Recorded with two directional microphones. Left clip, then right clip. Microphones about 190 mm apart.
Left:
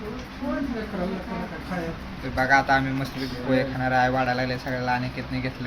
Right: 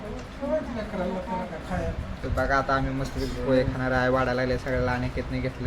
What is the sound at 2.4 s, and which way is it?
Speech, 15° right (ahead or behind).